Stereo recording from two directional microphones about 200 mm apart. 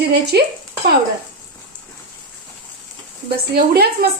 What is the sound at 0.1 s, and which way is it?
Speech, 55° right (ahead or behind).